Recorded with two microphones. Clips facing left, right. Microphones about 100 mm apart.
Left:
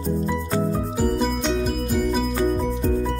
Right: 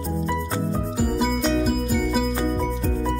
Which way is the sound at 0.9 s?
5° right (ahead or behind).